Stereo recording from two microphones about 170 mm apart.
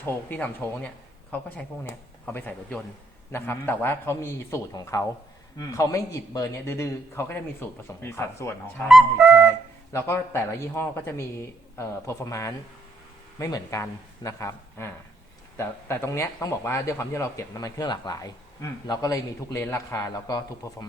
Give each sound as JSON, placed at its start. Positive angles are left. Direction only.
{"t": 0.0, "sound": "a man's voice", "side_deg": 10}
{"t": 8.9, "sound": "flute", "side_deg": 0}
{"t": 9.9, "sound": "a man's voice", "side_deg": 15}